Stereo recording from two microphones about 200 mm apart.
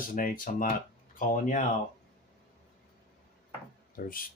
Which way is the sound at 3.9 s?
45° left (ahead or behind).